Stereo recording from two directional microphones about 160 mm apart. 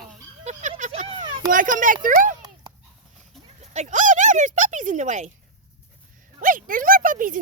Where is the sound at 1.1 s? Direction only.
30° right (ahead or behind).